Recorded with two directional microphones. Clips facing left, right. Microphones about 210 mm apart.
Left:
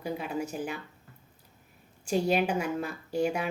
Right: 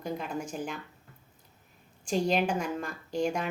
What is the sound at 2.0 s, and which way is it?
Speech, 5° left (ahead or behind).